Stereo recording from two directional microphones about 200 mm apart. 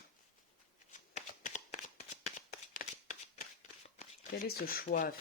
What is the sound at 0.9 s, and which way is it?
Shuffling cards, 35° left (ahead or behind).